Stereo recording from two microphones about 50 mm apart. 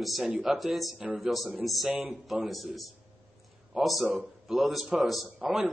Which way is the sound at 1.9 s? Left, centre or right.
Right.